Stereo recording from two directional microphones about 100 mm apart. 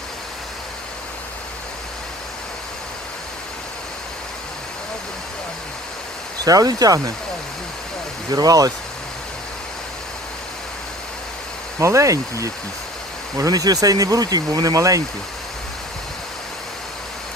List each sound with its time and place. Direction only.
6.4 s speech: 40° right (ahead or behind)
8.3 s speech: 40° right (ahead or behind)
11.8 s speech: 30° right (ahead or behind)